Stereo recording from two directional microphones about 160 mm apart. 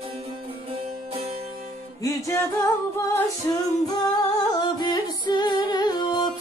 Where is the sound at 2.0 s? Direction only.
20° left (ahead or behind).